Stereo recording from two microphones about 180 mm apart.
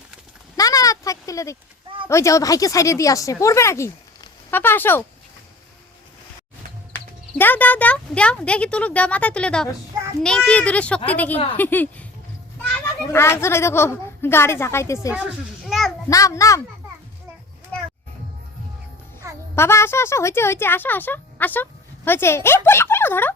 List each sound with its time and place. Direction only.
0.5 s a sound: 20° left (ahead or behind)
2.0 s a woman's voice: 15° left (ahead or behind)
6.9 s a woman's voice: 10° left (ahead or behind)
13.1 s a woman's voice: 15° left (ahead or behind)
15.6 s a sound: centre (ahead or behind)
16.0 s a woman's voice: 20° left (ahead or behind)
19.5 s speech: 15° left (ahead or behind)